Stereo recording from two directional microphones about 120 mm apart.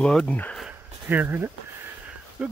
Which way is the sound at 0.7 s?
15° right (ahead or behind).